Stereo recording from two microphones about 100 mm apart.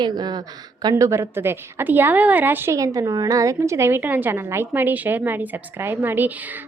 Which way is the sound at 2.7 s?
35° right (ahead or behind).